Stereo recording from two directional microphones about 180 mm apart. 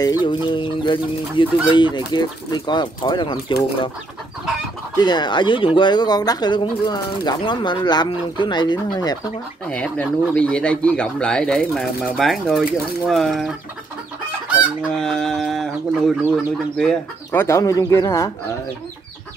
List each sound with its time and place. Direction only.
0.0 s speech: 25° left (ahead or behind)
4.9 s speech: 25° left (ahead or behind)
9.7 s speech: 5° left (ahead or behind)
14.5 s speech: centre (ahead or behind); by 18.3 s 15° left (ahead or behind)